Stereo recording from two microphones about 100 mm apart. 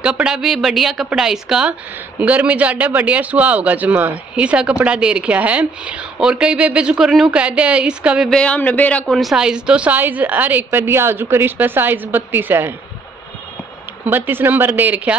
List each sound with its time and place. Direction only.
0.0 s a woman's voice: 10° right (ahead or behind)
8.3 s speech: 10° left (ahead or behind)
9.0 s a woman's voice: centre (ahead or behind); by 12.7 s 20° right (ahead or behind)
14.0 s a woman's voice: 20° right (ahead or behind)